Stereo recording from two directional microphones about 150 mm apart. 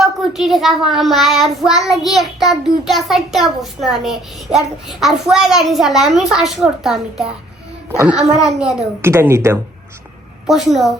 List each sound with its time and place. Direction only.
0.0 s a child's voice: centre (ahead or behind)
9.0 s a child's voice: 15° right (ahead or behind)
10.5 s a child's voice: centre (ahead or behind)